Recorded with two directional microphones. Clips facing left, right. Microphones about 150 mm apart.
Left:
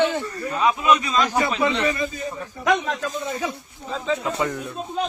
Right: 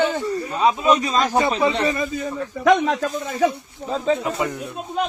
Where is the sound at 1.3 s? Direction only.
25° right (ahead or behind).